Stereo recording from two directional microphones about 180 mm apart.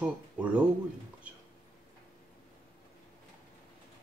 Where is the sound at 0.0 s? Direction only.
5° right (ahead or behind).